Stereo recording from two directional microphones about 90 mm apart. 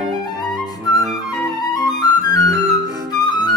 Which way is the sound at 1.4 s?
50° left (ahead or behind).